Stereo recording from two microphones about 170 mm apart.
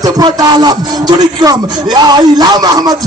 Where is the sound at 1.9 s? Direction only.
25° right (ahead or behind).